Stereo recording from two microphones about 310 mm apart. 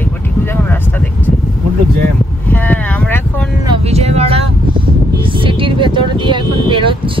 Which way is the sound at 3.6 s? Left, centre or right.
Centre.